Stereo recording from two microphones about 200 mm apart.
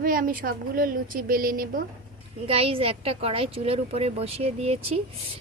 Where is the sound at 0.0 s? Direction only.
45° right (ahead or behind).